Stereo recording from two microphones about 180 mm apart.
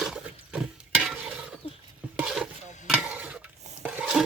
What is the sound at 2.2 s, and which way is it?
Stir, 5° right (ahead or behind).